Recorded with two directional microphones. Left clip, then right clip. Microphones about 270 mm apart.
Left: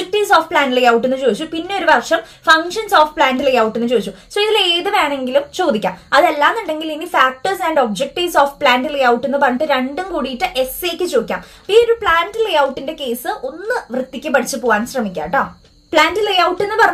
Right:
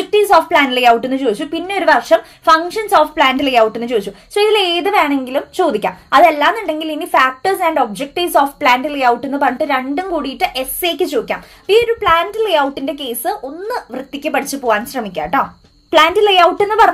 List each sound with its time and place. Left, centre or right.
0.1 s speech: right
14.7 s speech: right